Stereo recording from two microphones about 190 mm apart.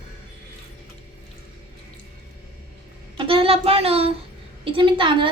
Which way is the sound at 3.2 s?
30° right (ahead or behind).